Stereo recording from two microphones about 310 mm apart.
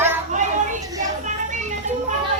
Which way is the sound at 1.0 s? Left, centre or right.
Right.